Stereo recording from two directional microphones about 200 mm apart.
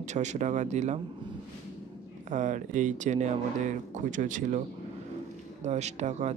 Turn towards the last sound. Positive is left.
turn(degrees=-35)  # may be behind; listen again after turning